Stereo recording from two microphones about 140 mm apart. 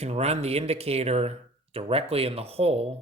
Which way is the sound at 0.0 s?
50° right (ahead or behind).